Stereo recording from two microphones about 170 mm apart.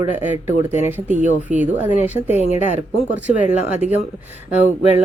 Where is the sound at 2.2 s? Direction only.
40° left (ahead or behind).